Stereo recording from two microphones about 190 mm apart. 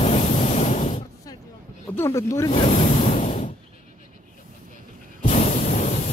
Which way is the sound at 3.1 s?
40° left (ahead or behind).